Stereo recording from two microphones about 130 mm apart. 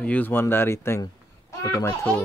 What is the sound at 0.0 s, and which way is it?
A child's voice, 10° left (ahead or behind).